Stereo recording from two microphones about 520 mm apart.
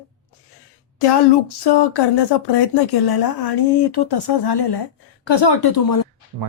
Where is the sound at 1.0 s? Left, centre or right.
Left.